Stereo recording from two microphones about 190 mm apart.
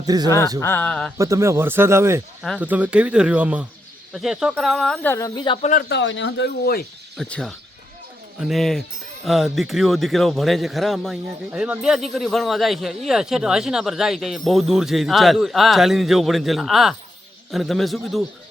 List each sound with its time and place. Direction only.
0.0 s speech: 20° right (ahead or behind)
0.6 s speech: 10° left (ahead or behind)
1.2 s speech: 15° right (ahead or behind); by 5.1 s centre (ahead or behind)
5.1 s speech: 15° left (ahead or behind)
5.9 s speech: 70° left (ahead or behind); by 6.8 s 55° left (ahead or behind)
7.2 s speech: 5° left (ahead or behind)